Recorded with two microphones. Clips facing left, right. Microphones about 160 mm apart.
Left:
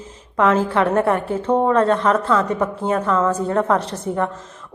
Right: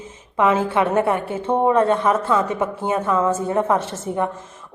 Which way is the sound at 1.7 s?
5° right (ahead or behind).